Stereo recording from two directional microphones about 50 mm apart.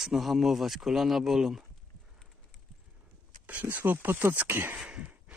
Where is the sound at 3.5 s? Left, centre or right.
Right.